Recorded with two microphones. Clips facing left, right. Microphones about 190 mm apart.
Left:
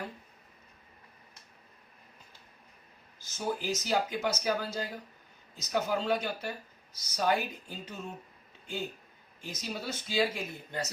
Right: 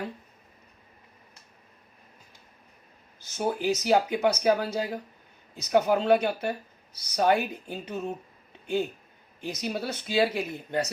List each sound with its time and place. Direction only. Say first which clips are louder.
3.2 s speech: right 5 dB; 60° right (ahead or behind)
9.4 s speech: right 7 dB; 65° right (ahead or behind)